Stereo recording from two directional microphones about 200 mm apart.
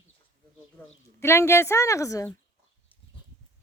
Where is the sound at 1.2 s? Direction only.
15° left (ahead or behind).